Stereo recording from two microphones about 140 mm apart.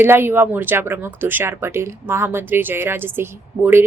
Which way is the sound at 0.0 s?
15° right (ahead or behind).